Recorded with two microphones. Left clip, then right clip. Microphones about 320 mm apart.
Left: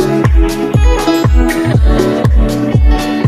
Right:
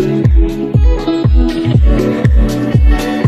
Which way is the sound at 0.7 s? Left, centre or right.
Left.